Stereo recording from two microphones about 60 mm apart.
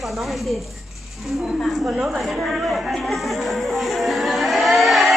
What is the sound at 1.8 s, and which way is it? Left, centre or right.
Speech, right.